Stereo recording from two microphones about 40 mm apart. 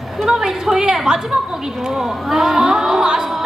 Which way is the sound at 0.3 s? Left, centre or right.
Centre.